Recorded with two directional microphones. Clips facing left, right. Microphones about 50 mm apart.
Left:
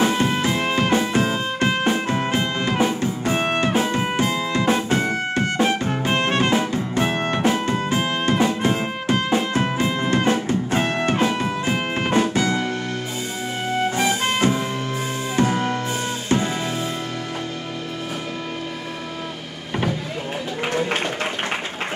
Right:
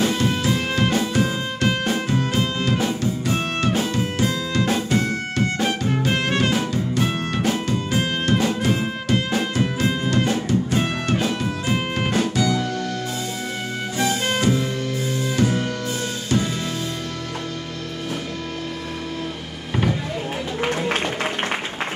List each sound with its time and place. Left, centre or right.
0.0 s music: left
7.9 s music: centre
8.3 s music: left
13.9 s music: left